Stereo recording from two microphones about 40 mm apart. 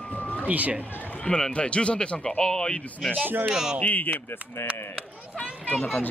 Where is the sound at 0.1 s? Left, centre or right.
Left.